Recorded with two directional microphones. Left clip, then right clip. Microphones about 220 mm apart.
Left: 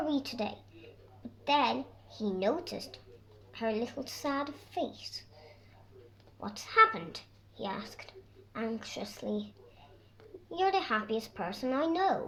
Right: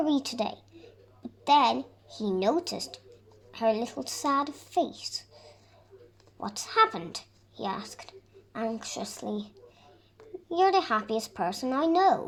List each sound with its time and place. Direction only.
0.0 s a woman's voice: 35° right (ahead or behind)
6.4 s a woman's voice: 30° right (ahead or behind)
10.5 s a woman's voice: 30° right (ahead or behind)